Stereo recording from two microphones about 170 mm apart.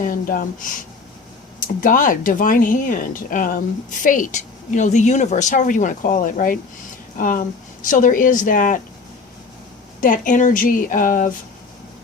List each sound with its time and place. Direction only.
0.0 s a woman's voice: 55° left (ahead or behind)
10.0 s a woman's voice: 50° left (ahead or behind)